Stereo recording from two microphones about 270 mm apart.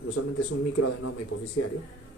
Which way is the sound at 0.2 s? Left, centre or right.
Left.